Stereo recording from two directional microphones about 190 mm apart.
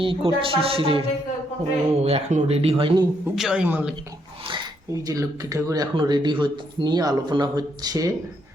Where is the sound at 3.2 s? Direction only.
5° right (ahead or behind).